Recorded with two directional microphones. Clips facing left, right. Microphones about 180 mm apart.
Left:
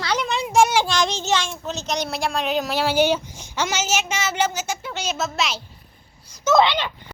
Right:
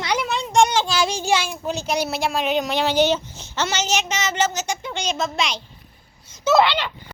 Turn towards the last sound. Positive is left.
turn(degrees=15)  # may be behind; listen again after turning